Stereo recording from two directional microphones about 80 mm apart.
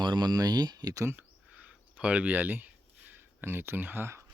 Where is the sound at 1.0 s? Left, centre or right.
Right.